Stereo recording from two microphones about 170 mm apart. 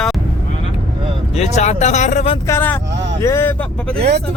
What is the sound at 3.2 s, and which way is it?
Speech, 15° left (ahead or behind).